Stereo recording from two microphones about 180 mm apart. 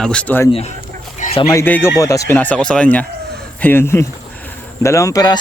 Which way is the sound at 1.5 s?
15° left (ahead or behind).